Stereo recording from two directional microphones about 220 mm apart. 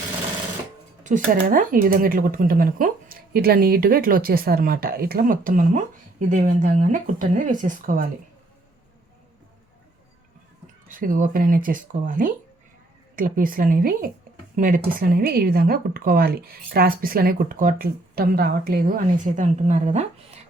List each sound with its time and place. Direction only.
1.0 s speech: 35° right (ahead or behind)
10.8 s speech: 40° right (ahead or behind)